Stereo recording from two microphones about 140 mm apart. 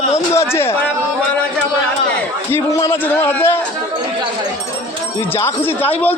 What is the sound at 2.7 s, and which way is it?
Speech, 20° left (ahead or behind).